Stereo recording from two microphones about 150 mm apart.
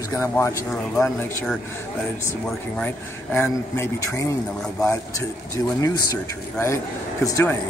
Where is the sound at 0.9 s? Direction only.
5° left (ahead or behind).